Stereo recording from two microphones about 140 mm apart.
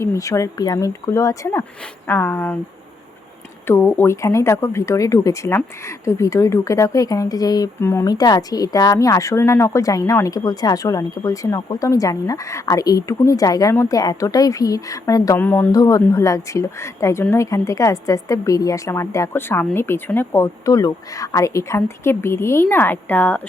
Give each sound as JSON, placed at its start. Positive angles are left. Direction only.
{"t": 0.0, "sound": "speech", "side_deg": 20}
{"t": 3.7, "sound": "speech", "side_deg": 15}
{"t": 15.4, "sound": "speech", "side_deg": 15}
{"t": 15.7, "sound": "speech", "side_deg": 25}